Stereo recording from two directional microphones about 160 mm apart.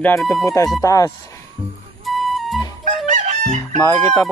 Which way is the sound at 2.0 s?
Centre (ahead or behind).